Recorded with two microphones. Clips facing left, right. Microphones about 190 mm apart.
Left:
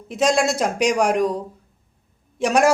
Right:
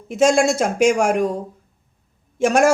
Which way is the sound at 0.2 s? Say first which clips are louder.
Right 4 dB; 50° right (ahead or behind).